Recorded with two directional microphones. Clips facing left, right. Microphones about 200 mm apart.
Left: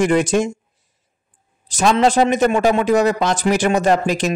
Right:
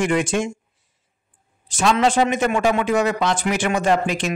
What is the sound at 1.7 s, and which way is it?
Speech, 40° left (ahead or behind).